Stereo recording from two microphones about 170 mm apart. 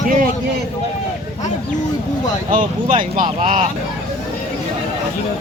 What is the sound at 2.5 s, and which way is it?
Speech, 50° right (ahead or behind).